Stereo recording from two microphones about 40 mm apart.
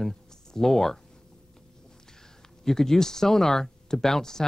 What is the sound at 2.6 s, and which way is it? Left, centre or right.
Speech, centre.